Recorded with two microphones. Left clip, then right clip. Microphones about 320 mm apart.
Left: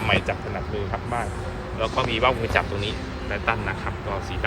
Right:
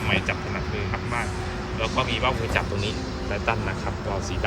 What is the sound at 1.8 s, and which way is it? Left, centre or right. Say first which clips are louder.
Speech: left 3 dB; centre.